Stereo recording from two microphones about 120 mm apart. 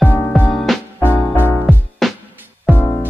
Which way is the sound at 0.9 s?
15° left (ahead or behind).